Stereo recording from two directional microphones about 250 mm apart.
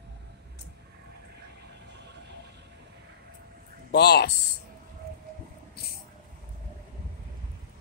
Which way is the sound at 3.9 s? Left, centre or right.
Left.